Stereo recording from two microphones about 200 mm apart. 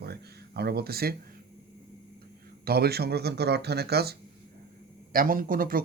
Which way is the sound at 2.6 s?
50° right (ahead or behind).